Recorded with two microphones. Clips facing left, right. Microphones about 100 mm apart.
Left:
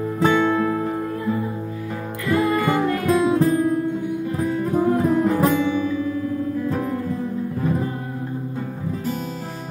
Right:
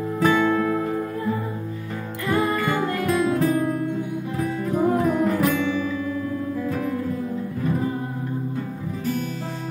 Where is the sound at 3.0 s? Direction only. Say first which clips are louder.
Left 3 dB; 30° left (ahead or behind).